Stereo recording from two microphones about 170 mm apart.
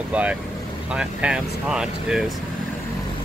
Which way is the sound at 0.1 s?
10° right (ahead or behind).